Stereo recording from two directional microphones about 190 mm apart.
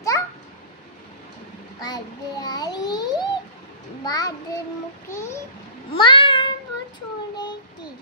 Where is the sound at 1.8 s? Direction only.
20° left (ahead or behind).